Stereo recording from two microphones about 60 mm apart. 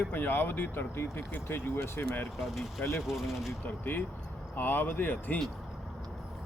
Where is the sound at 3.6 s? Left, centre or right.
Left.